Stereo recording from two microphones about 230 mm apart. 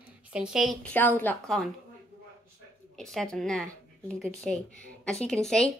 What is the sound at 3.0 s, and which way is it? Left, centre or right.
Speech, centre.